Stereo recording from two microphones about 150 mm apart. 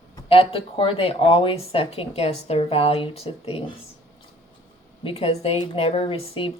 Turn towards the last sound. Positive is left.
turn(degrees=35)  # may be behind; listen again after turning